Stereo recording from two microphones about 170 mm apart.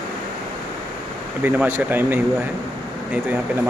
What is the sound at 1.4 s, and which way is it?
Speech, 10° right (ahead or behind).